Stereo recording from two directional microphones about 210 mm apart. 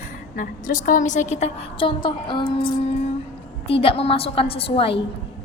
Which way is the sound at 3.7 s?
25° left (ahead or behind).